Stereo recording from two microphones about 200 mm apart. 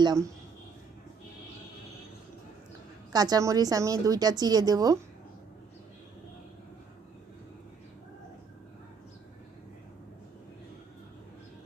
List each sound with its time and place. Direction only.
0.0 s a woman's voice: 20° right (ahead or behind)
3.1 s a woman's voice: 20° right (ahead or behind)